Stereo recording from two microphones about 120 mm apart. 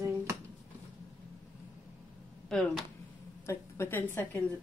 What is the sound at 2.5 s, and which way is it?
Speech, 5° left (ahead or behind).